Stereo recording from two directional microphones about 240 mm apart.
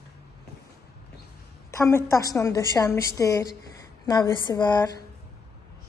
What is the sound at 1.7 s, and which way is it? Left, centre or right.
A woman's voice, centre.